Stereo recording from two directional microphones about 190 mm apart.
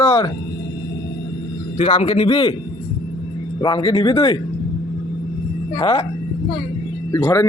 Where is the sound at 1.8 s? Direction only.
30° left (ahead or behind).